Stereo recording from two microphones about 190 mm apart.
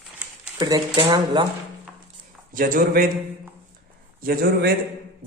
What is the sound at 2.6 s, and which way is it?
Speech, 45° right (ahead or behind).